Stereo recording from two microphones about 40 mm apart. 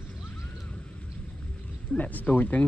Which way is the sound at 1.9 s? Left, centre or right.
Left.